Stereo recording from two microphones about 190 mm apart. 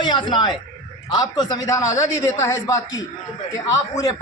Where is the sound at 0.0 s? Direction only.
25° left (ahead or behind).